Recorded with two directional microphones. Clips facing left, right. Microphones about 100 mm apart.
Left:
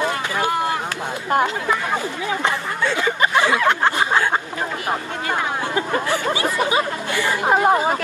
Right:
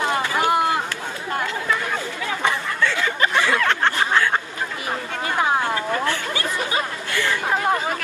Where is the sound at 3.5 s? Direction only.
10° left (ahead or behind).